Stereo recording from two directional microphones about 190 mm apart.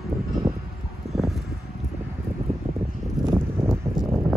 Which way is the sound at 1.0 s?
35° right (ahead or behind).